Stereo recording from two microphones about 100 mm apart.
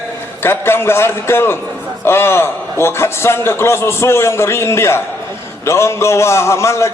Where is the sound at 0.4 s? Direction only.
25° left (ahead or behind).